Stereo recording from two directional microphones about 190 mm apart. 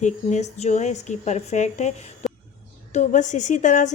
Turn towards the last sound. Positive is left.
turn(degrees=40)  # may be behind; listen again after turning